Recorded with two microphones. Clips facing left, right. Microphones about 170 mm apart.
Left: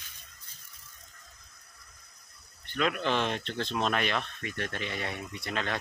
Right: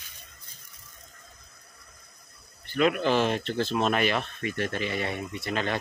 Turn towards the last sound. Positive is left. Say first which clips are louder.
# right 4 dB
turn(degrees=0)  # may be behind; listen again after turning